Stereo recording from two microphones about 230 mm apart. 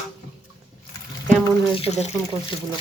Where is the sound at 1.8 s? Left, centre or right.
Left.